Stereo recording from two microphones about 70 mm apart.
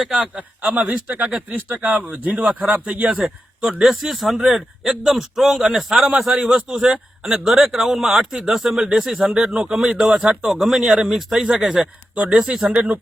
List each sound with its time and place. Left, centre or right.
0.0 s speech: centre
0.6 s speech: right
3.2 s a man's voice: centre
6.6 s speech: centre
12.3 s speech: centre